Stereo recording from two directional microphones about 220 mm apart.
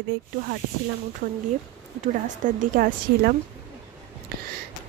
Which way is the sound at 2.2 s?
35° right (ahead or behind).